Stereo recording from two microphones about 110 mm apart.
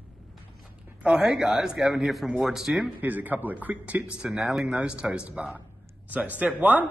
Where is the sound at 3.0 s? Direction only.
15° right (ahead or behind).